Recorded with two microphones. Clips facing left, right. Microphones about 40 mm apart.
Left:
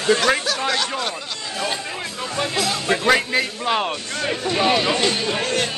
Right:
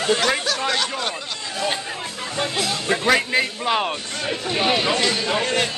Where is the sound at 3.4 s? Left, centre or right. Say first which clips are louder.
Even; centre.